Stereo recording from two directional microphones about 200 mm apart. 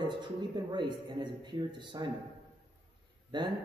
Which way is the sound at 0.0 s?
20° right (ahead or behind).